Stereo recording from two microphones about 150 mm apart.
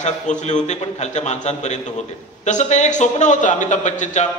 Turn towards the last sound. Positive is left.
turn(degrees=55)  # may be behind; listen again after turning